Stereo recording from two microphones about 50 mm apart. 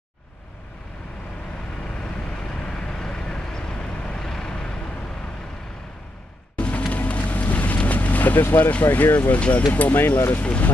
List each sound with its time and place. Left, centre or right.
2.5 s vehicle: centre
6.5 s music: left
8.5 s speech: left
10.4 s speech: left